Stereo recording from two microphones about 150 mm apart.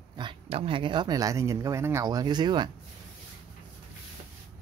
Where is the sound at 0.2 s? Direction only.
35° right (ahead or behind).